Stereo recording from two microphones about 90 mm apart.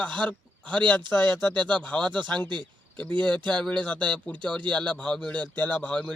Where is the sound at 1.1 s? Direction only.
20° left (ahead or behind).